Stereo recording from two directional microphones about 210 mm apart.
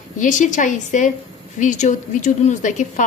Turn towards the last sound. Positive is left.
turn(degrees=35)  # may be behind; listen again after turning